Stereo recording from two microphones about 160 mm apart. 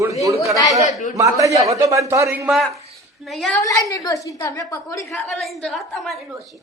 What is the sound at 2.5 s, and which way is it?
Speech, centre (ahead or behind).